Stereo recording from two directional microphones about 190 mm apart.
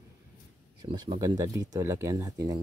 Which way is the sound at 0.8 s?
25° right (ahead or behind).